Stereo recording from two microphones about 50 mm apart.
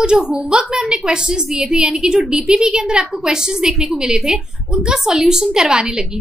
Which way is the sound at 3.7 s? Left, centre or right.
Centre.